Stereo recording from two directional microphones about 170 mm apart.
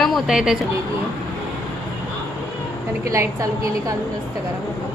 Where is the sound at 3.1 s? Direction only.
20° right (ahead or behind).